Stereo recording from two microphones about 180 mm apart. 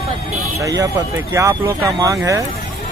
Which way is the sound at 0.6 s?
20° right (ahead or behind).